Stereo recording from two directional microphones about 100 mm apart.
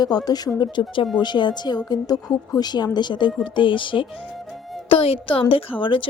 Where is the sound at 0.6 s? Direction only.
55° left (ahead or behind).